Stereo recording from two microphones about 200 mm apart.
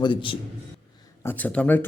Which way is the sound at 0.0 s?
25° left (ahead or behind).